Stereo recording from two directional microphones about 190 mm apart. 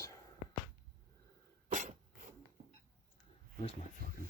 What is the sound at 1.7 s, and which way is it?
Cough, 40° right (ahead or behind).